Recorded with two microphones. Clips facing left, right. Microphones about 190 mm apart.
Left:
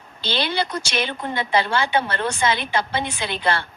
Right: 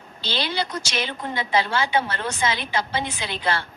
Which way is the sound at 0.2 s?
60° left (ahead or behind).